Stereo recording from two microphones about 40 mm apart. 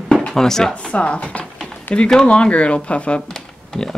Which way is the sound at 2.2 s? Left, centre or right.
Left.